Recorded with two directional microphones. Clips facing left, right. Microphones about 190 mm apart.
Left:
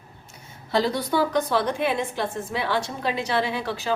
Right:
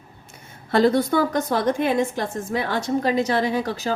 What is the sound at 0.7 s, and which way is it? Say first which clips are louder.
A woman's voice: right 5 dB; 50° right (ahead or behind).